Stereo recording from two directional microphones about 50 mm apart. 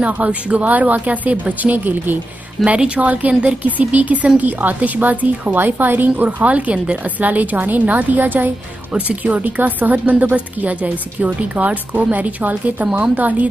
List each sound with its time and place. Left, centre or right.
0.0 s speech: right